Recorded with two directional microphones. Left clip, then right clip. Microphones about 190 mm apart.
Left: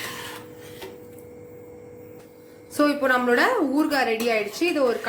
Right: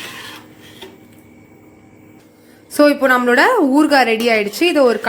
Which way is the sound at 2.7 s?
50° right (ahead or behind).